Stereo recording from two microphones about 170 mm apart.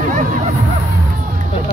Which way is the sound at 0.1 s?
50° right (ahead or behind).